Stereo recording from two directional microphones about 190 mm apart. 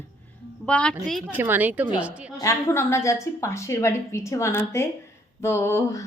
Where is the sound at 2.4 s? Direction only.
15° left (ahead or behind).